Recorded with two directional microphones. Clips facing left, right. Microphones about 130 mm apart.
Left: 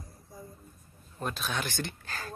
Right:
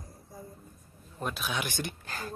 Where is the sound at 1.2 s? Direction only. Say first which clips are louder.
Even; 5° right (ahead or behind).